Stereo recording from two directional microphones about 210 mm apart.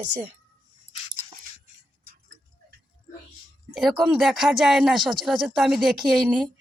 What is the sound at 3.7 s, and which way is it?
Speech, centre (ahead or behind).